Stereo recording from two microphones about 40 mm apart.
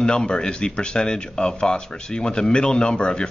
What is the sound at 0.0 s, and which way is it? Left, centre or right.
Speech, left.